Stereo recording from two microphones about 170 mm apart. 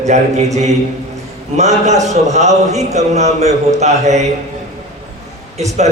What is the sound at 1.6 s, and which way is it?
A man's voice, 40° right (ahead or behind).